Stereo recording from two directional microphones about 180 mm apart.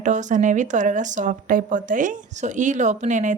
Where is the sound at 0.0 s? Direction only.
45° right (ahead or behind).